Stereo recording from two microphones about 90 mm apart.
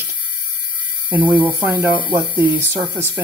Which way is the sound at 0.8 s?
15° right (ahead or behind).